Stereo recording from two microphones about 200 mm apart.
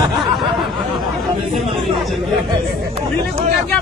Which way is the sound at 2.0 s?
Centre (ahead or behind).